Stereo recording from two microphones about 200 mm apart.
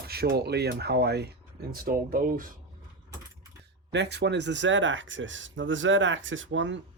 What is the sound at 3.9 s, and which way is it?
Speech, 60° right (ahead or behind).